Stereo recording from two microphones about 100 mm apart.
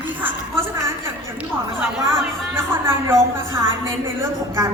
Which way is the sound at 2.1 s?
25° right (ahead or behind).